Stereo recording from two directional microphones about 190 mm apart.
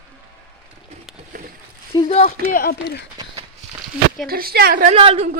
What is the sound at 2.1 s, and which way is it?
Speech, 40° left (ahead or behind).